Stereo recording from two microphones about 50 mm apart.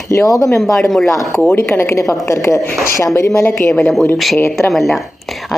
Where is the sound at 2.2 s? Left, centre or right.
Left.